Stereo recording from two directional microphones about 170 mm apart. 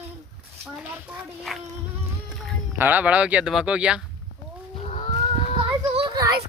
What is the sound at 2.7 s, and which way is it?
Speech, 10° right (ahead or behind).